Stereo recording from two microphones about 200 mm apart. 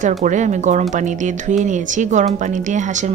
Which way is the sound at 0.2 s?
35° right (ahead or behind).